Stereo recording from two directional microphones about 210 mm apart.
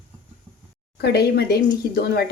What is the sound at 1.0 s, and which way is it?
A woman's voice, 50° left (ahead or behind).